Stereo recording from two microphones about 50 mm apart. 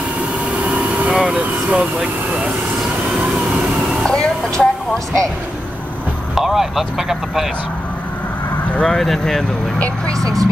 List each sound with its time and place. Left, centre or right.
0.7 s vehicle: right
1.1 s vehicle: centre
4.0 s a sound: centre
6.3 s speech: centre
8.8 s speech: centre